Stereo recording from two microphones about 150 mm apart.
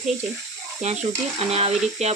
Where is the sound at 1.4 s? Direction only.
45° right (ahead or behind).